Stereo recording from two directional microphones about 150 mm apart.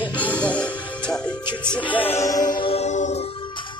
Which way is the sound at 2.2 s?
25° left (ahead or behind).